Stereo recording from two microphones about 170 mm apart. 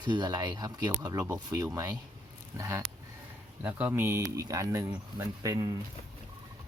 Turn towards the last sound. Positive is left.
turn(degrees=-20)  # may be behind; listen again after turning